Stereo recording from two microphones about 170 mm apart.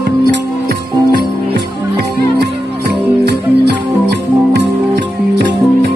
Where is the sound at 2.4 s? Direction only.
70° right (ahead or behind).